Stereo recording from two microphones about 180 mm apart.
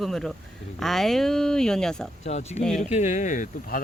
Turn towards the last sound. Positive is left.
turn(degrees=45)  # may be behind; listen again after turning